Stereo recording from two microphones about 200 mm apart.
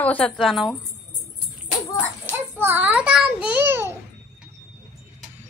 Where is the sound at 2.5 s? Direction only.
10° right (ahead or behind).